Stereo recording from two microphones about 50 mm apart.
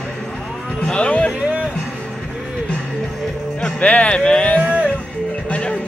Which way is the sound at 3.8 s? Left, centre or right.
Left.